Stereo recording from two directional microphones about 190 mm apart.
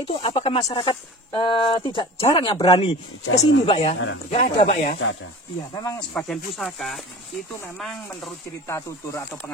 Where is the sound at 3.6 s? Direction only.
30° left (ahead or behind).